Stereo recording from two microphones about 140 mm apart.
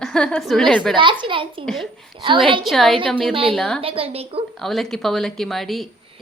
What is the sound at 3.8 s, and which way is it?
Speech, 40° right (ahead or behind).